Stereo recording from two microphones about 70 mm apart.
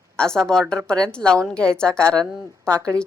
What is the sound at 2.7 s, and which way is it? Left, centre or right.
Speech, right.